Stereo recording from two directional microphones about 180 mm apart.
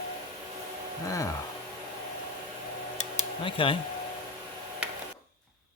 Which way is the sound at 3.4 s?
30° left (ahead or behind).